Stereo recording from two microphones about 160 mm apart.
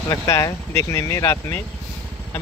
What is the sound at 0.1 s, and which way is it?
Speech, 20° left (ahead or behind).